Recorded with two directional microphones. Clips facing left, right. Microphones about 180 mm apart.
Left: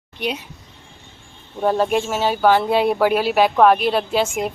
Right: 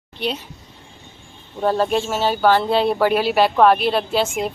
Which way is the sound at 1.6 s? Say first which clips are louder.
Left 1 dB; 10° left (ahead or behind).